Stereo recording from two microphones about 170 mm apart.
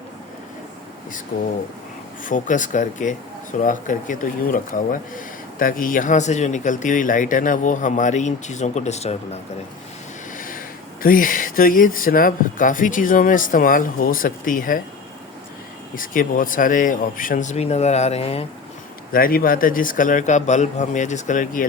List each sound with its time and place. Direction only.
2.2 s speech: 50° left (ahead or behind)
10.3 s a sound: 55° left (ahead or behind)
11.0 s speech: 55° left (ahead or behind)
16.0 s speech: 55° left (ahead or behind); by 18.4 s 35° left (ahead or behind)
19.1 s speech: 60° left (ahead or behind)